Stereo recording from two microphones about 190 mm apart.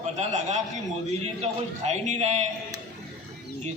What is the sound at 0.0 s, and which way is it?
Speech, 35° right (ahead or behind).